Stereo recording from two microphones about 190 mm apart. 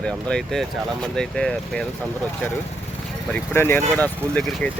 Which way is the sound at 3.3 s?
10° left (ahead or behind).